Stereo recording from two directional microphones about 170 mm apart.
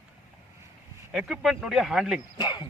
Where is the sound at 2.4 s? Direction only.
25° left (ahead or behind).